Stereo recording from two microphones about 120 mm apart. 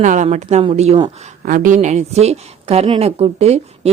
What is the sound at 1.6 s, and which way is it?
Speech, 85° right.